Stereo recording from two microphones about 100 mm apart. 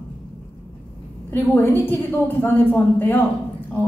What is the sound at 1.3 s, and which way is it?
Speech, 20° left (ahead or behind).